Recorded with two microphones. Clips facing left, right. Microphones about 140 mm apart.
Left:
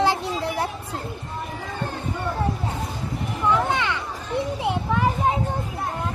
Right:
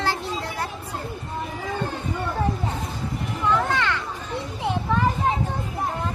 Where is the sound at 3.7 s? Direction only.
20° left (ahead or behind).